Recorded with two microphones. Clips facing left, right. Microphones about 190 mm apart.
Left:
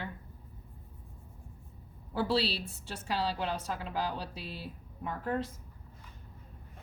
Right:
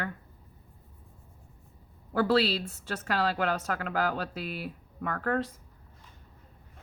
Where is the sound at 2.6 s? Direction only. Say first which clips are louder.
Right 4 dB; 70° right (ahead or behind).